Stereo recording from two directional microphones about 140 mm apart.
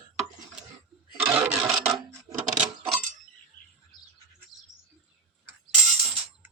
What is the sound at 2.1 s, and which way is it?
Coin, 25° right (ahead or behind).